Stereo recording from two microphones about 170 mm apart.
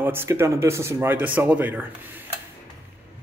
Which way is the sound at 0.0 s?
15° right (ahead or behind).